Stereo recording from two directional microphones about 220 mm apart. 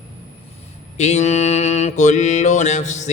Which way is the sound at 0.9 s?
30° left (ahead or behind).